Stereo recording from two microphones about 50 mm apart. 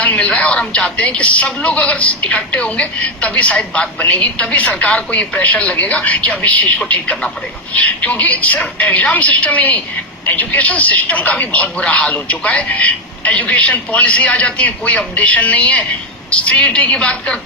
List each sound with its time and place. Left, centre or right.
0.0 s a woman's voice: left